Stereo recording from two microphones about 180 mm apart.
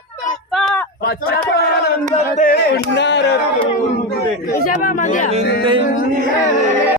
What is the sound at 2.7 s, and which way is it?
Speech, 75° left (ahead or behind).